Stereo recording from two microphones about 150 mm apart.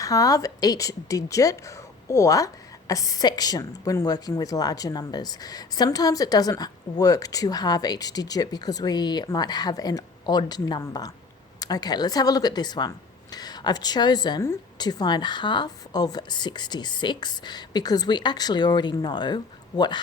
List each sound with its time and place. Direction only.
0.0 s speech: 25° left (ahead or behind)